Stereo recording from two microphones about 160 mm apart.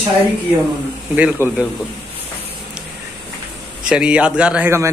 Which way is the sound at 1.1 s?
10° right (ahead or behind).